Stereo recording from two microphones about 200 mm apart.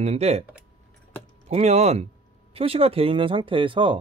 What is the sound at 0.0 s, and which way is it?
Speech, 35° right (ahead or behind).